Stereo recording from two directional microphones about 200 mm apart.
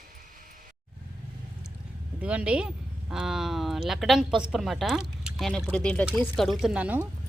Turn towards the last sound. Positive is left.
turn(degrees=-5)  # may be behind; listen again after turning